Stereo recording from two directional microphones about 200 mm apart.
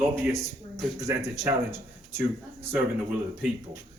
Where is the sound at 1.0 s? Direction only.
15° right (ahead or behind).